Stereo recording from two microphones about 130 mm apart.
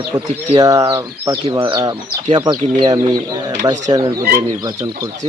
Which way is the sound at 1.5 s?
40° right (ahead or behind).